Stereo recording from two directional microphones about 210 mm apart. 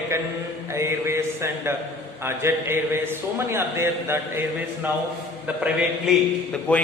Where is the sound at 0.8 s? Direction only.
15° right (ahead or behind).